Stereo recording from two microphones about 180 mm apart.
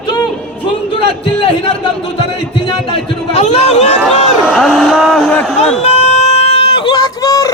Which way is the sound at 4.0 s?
5° right (ahead or behind).